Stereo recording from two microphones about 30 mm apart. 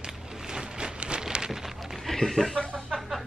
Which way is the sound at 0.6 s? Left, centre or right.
Right.